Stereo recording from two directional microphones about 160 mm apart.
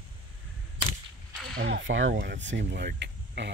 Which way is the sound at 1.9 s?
70° right (ahead or behind).